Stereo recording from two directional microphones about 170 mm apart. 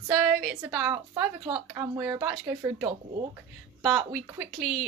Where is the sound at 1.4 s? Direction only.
20° right (ahead or behind).